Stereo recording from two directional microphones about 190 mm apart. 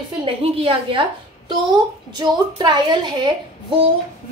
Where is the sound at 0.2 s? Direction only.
30° right (ahead or behind).